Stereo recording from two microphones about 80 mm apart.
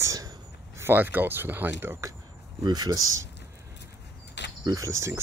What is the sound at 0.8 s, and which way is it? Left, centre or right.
Speech, right.